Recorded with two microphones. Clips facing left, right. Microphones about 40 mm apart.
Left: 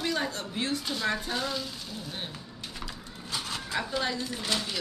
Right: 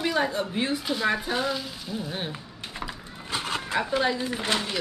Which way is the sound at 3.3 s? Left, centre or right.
Right.